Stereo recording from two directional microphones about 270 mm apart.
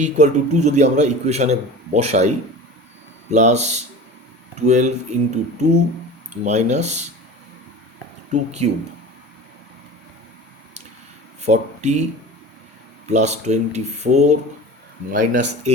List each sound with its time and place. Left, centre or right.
0.0 s a man's voice: right
8.3 s a man's voice: right
11.4 s speech: right
13.1 s a man's voice: right